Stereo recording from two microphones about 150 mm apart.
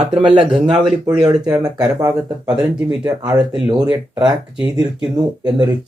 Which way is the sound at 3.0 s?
25° right (ahead or behind).